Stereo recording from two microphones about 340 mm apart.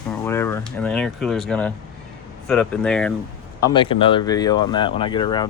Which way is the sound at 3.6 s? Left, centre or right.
Centre.